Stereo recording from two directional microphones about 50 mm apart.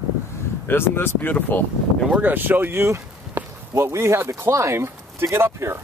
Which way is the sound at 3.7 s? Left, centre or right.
Right.